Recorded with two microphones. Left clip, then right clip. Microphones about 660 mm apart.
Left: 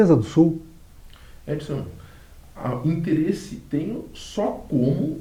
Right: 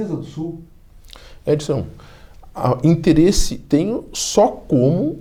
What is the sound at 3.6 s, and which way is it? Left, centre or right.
Speech, right.